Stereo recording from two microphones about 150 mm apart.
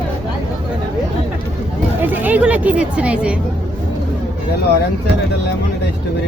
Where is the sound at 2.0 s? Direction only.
10° right (ahead or behind).